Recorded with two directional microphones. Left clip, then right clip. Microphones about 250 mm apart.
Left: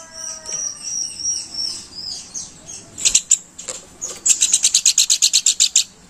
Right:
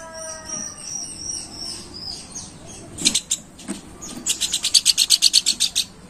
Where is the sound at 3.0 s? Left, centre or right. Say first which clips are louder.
Left 4 dB; centre.